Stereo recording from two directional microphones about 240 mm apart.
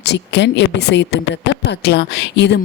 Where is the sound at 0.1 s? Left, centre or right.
Left.